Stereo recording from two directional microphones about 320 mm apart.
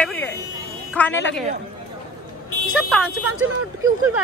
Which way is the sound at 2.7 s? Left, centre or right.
Centre.